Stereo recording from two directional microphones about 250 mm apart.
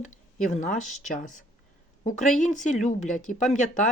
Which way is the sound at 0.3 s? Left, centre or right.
Left.